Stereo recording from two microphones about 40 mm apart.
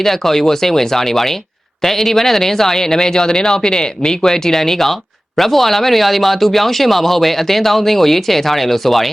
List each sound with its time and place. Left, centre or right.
0.0 s speech: centre